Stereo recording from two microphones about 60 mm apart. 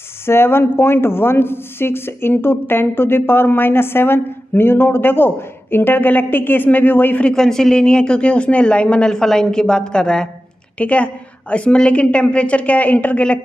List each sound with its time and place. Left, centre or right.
0.3 s speech: left
7.2 s speech: centre
10.8 s speech: left